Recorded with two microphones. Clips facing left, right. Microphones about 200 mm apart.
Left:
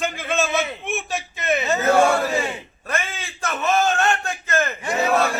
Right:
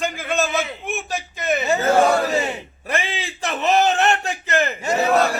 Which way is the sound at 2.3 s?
20° right (ahead or behind).